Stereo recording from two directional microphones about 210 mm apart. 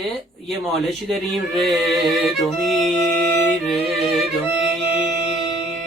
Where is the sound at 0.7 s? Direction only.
Centre (ahead or behind).